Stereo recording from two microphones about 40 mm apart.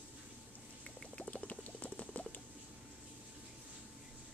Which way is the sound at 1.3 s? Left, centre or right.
Left.